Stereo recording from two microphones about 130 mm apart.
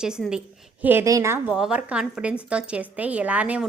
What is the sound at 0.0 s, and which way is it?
A woman's voice, 5° right (ahead or behind).